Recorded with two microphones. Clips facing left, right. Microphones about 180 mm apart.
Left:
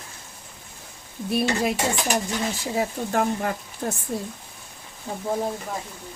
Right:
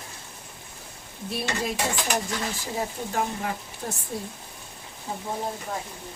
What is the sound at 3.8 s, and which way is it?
Speech, 55° left (ahead or behind).